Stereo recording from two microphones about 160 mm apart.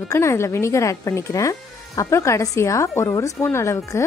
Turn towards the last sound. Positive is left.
turn(degrees=15)  # may be behind; listen again after turning